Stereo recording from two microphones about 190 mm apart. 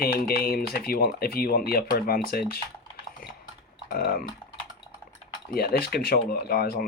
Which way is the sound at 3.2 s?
45° left (ahead or behind).